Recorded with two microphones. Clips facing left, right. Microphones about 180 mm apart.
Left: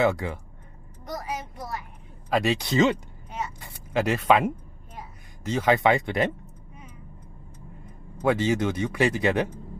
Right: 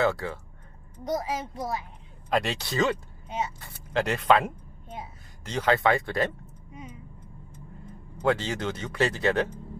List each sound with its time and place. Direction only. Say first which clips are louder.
0.0 s speech: left 2 dB; 15° left (ahead or behind)
1.0 s a child's voice: right 4 dB; 25° right (ahead or behind)
2.2 s speech: left 3 dB; 5° left (ahead or behind)
2.6 s speech: left 5 dB; 20° left (ahead or behind)
8.2 s speech: left 4 dB; 10° left (ahead or behind)